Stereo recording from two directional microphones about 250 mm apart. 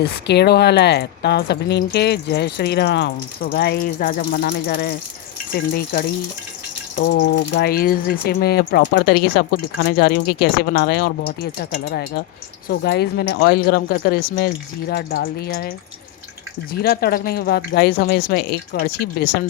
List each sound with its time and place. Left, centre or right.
0.3 s speech: left
16.7 s speech: left